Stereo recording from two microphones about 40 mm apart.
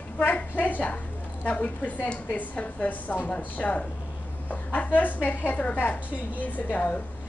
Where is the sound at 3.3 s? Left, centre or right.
Left.